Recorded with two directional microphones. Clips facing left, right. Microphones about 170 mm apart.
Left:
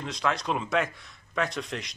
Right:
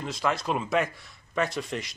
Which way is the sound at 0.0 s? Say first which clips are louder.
Right 1 dB; 5° right (ahead or behind).